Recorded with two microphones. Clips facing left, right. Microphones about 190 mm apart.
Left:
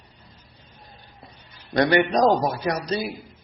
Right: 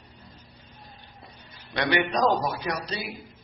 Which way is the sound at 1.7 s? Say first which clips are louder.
Left 6 dB; 45° left (ahead or behind).